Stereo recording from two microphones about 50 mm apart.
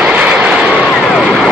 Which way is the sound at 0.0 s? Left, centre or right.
Right.